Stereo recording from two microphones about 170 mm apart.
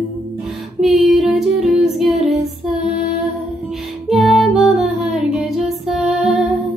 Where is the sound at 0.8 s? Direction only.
Centre (ahead or behind).